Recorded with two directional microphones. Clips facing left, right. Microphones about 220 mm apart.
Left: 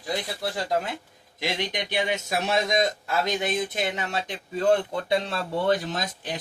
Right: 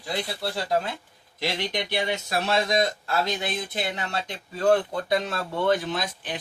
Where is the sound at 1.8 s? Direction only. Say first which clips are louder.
Left 1 dB; 20° left (ahead or behind).